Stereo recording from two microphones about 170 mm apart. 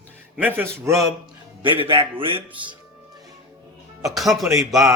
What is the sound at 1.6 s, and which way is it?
A man's voice, 30° right (ahead or behind).